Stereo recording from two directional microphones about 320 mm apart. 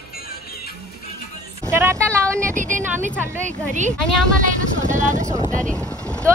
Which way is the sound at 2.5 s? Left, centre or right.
Right.